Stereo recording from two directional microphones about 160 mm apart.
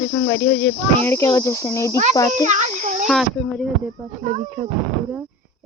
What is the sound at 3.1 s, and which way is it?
Speech, centre (ahead or behind).